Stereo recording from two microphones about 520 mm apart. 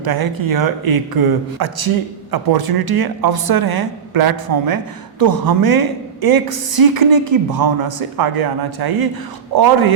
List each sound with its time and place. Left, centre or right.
0.0 s speech: right